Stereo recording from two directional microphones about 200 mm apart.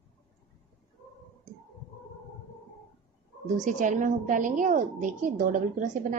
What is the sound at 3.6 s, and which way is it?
A woman's voice, 40° right (ahead or behind).